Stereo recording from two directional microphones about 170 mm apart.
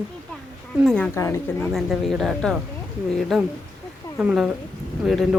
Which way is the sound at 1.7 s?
Centre (ahead or behind).